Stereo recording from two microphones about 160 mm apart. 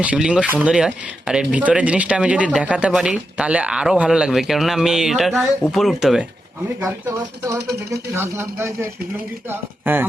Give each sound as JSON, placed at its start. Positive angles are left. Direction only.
{"t": 0.0, "sound": "speech", "side_deg": -5}
{"t": 8.1, "sound": "speech", "side_deg": -15}